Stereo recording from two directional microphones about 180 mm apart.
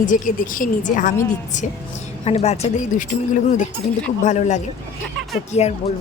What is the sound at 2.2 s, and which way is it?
Speech, 35° left (ahead or behind).